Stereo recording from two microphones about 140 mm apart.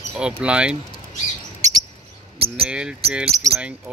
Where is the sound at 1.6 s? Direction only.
55° right (ahead or behind).